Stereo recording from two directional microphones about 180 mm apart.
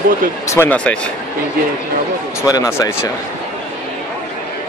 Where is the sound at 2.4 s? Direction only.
15° left (ahead or behind).